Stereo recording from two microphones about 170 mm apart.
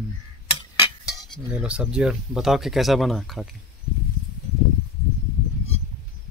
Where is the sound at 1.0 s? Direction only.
Centre (ahead or behind).